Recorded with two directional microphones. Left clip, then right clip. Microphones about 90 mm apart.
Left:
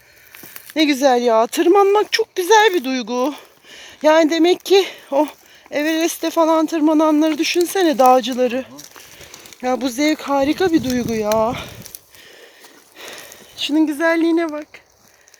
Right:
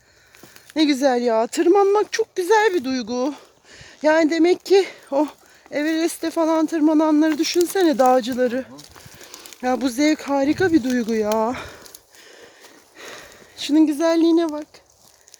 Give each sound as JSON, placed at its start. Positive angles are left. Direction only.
{"t": 0.7, "sound": "speech", "side_deg": -25}
{"t": 9.6, "sound": "speech", "side_deg": -35}
{"t": 13.0, "sound": "a sound", "side_deg": -20}
{"t": 13.6, "sound": "speech", "side_deg": -45}